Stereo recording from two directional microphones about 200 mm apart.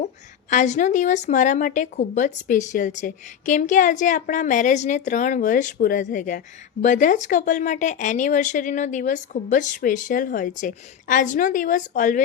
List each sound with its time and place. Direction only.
0.5 s a woman's voice: 35° left (ahead or behind)